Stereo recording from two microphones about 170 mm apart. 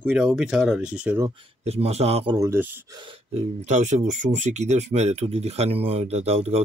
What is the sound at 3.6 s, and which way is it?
Speech, 45° right (ahead or behind).